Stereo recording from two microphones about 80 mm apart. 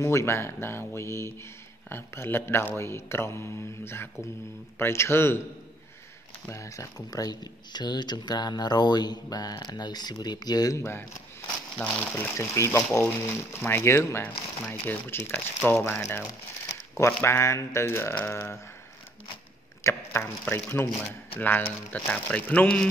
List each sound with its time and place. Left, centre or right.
0.0 s speech: left
6.5 s speech: left
10.8 s speech: left
11.8 s speech: centre
12.4 s speech: left
19.8 s speech: left; by 22.8 s centre